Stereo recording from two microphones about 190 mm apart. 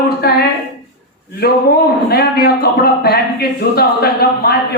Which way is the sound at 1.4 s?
55° left (ahead or behind).